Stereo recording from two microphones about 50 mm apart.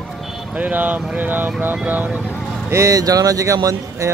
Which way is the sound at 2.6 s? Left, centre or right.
Right.